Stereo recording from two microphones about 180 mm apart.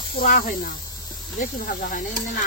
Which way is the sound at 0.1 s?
50° left (ahead or behind).